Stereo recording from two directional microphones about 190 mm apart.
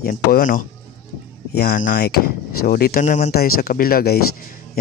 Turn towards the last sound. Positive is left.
turn(degrees=55)  # may be behind; listen again after turning